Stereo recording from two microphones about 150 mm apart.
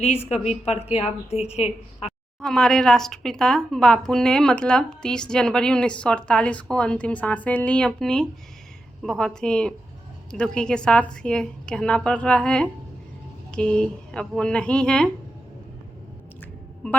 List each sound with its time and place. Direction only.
0.0 s a woman's voice: 45° left (ahead or behind)
2.4 s speech: 5° left (ahead or behind)
16.8 s speech: 10° left (ahead or behind)